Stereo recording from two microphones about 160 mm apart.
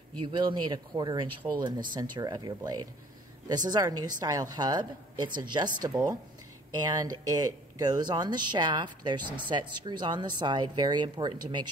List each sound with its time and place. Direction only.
0.2 s speech: 30° right (ahead or behind)